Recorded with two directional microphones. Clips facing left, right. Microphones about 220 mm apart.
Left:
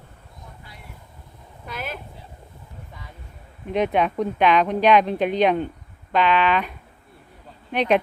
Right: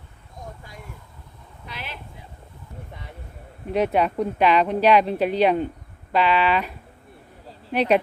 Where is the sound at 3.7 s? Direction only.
5° right (ahead or behind).